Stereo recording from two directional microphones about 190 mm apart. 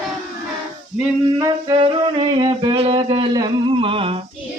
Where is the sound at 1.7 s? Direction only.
35° right (ahead or behind).